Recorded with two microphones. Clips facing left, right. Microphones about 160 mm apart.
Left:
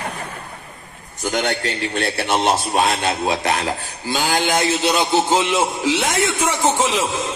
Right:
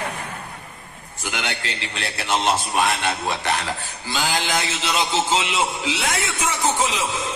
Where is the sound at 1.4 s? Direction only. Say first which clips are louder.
Left 7 dB; 50° left (ahead or behind).